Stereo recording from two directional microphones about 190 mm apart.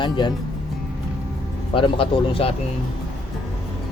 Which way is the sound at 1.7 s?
30° left (ahead or behind).